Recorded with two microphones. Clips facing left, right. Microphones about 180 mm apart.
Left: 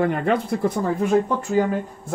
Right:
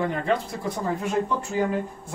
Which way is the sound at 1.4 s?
50° left (ahead or behind).